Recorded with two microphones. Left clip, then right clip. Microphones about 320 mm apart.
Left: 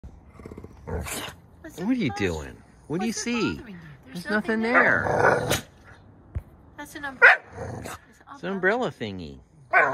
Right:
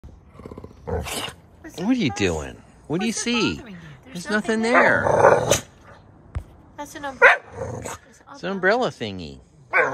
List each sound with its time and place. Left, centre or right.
0.4 s roar: right
1.8 s speech: centre
8.4 s speech: centre